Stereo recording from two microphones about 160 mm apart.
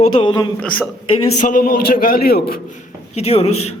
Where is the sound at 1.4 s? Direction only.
60° left (ahead or behind); by 2.6 s 75° left (ahead or behind).